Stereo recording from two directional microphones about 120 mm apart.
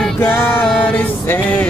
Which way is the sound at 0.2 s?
15° left (ahead or behind).